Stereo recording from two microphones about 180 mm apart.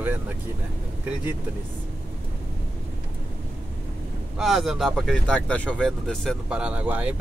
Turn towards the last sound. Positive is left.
turn(degrees=-10)  # may be behind; listen again after turning